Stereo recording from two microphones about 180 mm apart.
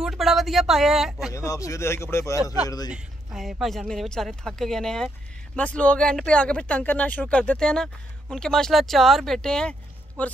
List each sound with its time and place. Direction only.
0.0 s speech: centre (ahead or behind)
1.3 s speech: 15° left (ahead or behind)
2.9 s speech: centre (ahead or behind)